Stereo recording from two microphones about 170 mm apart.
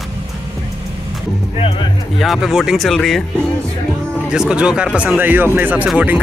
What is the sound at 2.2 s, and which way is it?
Speech, centre (ahead or behind).